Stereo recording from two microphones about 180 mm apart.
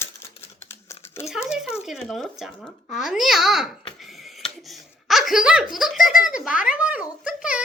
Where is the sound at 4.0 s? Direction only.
Centre (ahead or behind).